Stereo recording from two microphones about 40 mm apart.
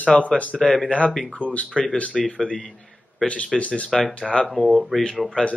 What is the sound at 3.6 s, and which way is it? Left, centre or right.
Speech, left.